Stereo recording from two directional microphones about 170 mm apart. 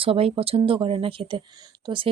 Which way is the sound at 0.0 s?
35° right (ahead or behind).